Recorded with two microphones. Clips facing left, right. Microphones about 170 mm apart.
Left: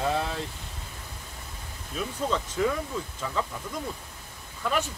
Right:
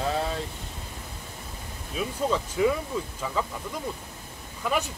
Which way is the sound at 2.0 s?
10° right (ahead or behind).